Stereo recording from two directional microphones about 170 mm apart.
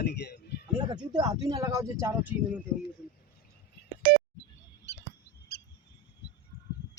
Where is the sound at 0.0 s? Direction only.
75° left (ahead or behind).